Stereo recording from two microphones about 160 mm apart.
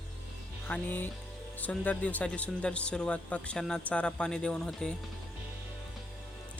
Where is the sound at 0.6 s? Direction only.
10° left (ahead or behind).